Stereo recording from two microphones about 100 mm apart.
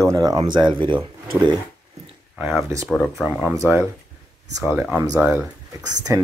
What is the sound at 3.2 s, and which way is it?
Speech, 20° right (ahead or behind).